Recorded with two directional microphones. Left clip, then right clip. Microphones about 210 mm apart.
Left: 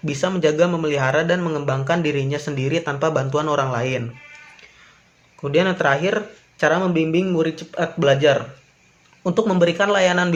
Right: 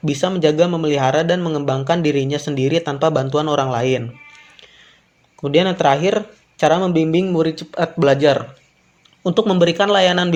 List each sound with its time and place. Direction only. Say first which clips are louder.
0.0 s a man's voice: right 3 dB; 20° right (ahead or behind)
5.4 s a man's voice: right 3 dB; 20° right (ahead or behind)